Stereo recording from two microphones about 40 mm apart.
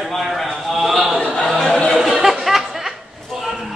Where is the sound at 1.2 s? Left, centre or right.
Left.